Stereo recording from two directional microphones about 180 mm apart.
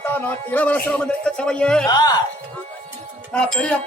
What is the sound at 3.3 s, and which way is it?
Speech, 5° left (ahead or behind).